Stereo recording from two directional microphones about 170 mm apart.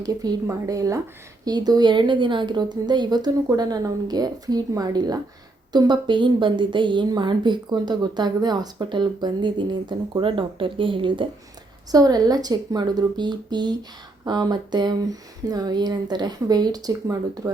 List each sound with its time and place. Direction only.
0.0 s a woman's voice: 20° right (ahead or behind)